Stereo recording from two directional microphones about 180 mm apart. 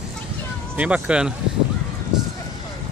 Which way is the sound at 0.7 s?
5° right (ahead or behind).